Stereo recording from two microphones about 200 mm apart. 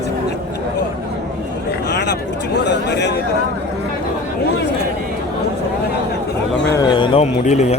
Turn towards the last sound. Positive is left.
turn(degrees=35)  # may be behind; listen again after turning